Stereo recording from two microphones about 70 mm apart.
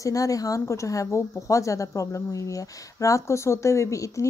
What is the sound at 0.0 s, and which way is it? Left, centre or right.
Speech, left.